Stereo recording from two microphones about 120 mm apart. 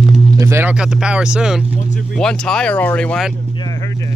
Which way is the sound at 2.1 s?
5° left (ahead or behind).